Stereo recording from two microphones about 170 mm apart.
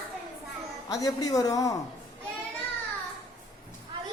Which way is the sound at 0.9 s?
20° left (ahead or behind).